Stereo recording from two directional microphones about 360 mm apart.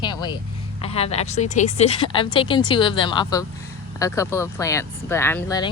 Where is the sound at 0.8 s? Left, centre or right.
Centre.